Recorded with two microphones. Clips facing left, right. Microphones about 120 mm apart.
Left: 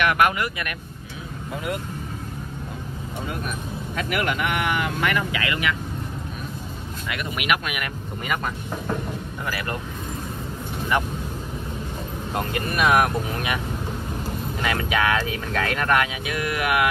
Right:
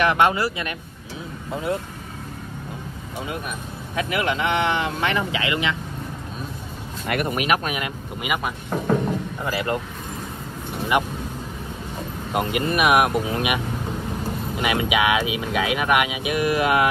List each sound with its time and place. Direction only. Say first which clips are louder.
0.0 s speech: right 2 dB; 25° right (ahead or behind)
3.9 s speech: right 2 dB; 20° right (ahead or behind)
7.1 s speech: right 7 dB; 50° right (ahead or behind)
7.3 s speech: right 3 dB; 35° right (ahead or behind)
7.8 s speech: right 2 dB; 10° right (ahead or behind)
9.4 s speech: right 3 dB; 25° right (ahead or behind)
12.3 s speech: right 4 dB; 20° right (ahead or behind)
14.6 s speech: right 2 dB; 15° right (ahead or behind)